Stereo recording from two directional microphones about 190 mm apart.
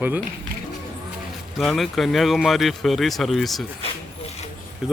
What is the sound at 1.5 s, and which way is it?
A man's voice, centre (ahead or behind).